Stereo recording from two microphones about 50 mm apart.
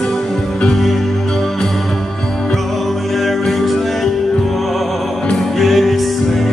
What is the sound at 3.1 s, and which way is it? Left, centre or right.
Music, centre.